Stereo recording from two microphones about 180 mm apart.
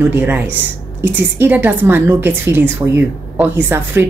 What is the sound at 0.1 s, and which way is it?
Speech, 10° right (ahead or behind).